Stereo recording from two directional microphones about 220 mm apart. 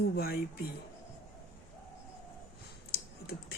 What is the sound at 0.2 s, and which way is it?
Speech, 45° left (ahead or behind).